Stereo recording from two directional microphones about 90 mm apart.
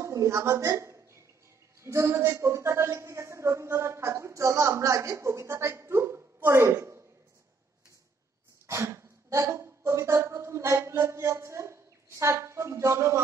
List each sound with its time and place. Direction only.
0.0 s a woman's voice: 35° right (ahead or behind)
8.6 s speech: 30° right (ahead or behind)